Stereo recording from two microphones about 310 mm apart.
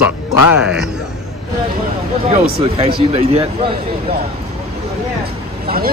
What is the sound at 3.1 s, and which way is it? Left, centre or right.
Speech, centre.